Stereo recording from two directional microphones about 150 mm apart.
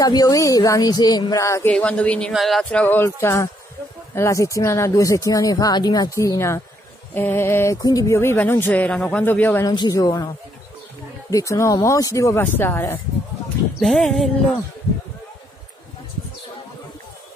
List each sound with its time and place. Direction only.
0.0 s speech: 25° left (ahead or behind)
9.7 s speech: 25° left (ahead or behind)
13.7 s speech: centre (ahead or behind)